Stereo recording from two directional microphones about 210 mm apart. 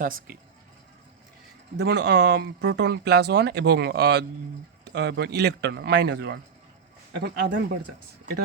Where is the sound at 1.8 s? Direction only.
50° right (ahead or behind).